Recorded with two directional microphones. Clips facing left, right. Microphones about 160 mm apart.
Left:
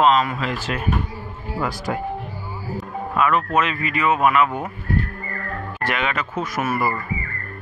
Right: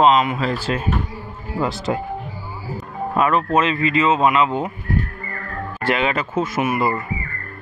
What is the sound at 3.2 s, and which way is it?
Speech, 30° right (ahead or behind).